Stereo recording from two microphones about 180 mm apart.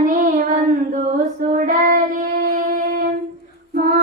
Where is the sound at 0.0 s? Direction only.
50° right (ahead or behind).